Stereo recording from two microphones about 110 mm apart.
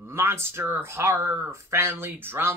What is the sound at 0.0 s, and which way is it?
Speech, 25° right (ahead or behind).